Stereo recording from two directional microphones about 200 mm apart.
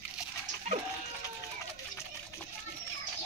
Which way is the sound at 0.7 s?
35° right (ahead or behind).